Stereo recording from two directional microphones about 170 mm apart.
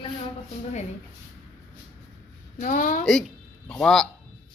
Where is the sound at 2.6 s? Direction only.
50° left (ahead or behind).